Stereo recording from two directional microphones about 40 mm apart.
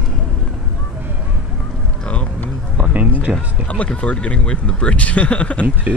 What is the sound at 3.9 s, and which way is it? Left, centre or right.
Speech, left.